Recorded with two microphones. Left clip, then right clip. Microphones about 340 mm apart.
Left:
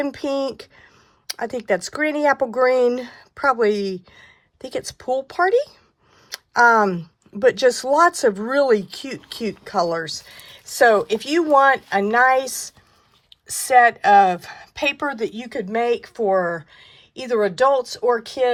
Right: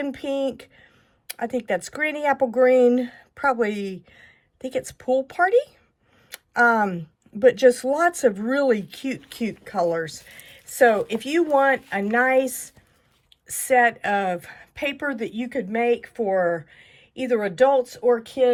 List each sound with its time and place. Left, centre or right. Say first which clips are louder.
0.1 s speech: left 2 dB; centre